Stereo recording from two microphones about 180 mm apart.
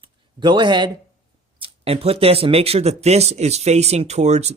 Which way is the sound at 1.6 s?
35° right (ahead or behind).